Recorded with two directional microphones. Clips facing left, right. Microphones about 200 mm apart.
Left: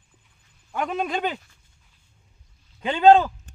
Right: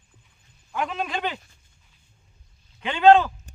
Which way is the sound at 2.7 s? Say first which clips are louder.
Left 1 dB; 35° left (ahead or behind).